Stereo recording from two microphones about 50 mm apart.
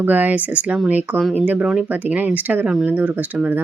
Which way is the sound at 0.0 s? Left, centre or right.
Right.